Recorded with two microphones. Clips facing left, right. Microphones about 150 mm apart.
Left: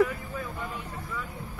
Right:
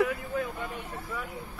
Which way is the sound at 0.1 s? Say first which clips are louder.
Right 4 dB; 60° right (ahead or behind).